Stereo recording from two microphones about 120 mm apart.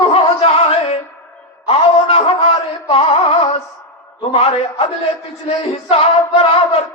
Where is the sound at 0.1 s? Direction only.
55° left (ahead or behind).